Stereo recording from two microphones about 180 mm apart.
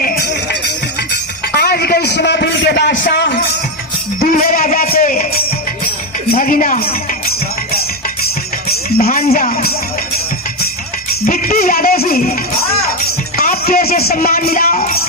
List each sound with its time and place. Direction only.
0.0 s music: 60° left (ahead or behind)
1.5 s a sound: 60° left (ahead or behind)
4.2 s music: 50° left (ahead or behind)
6.3 s a woman's voice: 50° left (ahead or behind)
9.0 s music: 55° left (ahead or behind)
11.3 s music: 55° left (ahead or behind)
13.3 s music: 55° left (ahead or behind)